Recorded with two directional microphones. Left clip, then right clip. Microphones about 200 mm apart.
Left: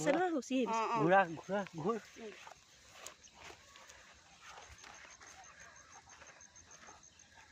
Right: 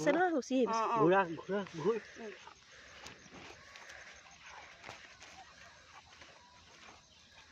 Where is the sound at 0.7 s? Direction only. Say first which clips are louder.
Even; 20° left (ahead or behind).